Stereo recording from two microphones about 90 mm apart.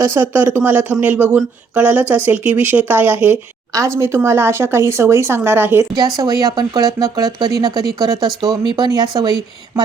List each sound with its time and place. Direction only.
0.0 s speech: 25° right (ahead or behind)
3.7 s speech: 35° right (ahead or behind)
6.1 s speech: 45° right (ahead or behind)